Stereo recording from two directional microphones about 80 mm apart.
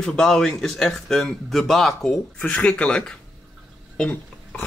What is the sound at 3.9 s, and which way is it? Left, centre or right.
Burping, centre.